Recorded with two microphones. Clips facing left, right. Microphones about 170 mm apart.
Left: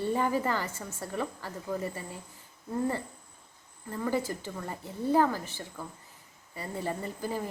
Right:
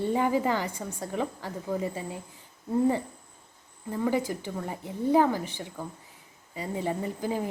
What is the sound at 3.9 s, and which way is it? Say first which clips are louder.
Speech: right 3 dB; 15° right (ahead or behind).